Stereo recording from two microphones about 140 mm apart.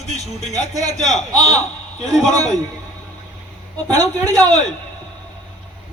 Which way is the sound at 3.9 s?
25° right (ahead or behind).